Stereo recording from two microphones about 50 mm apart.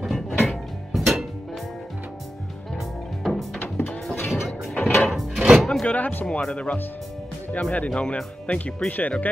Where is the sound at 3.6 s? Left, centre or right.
Left.